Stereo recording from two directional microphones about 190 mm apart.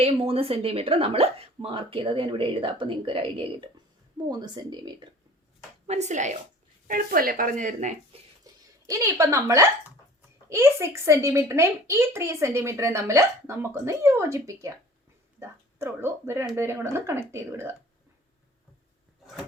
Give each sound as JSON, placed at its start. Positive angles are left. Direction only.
{"t": 0.0, "sound": "speech", "side_deg": -30}
{"t": 5.9, "sound": "a woman's voice", "side_deg": -40}
{"t": 8.9, "sound": "a woman's voice", "side_deg": -15}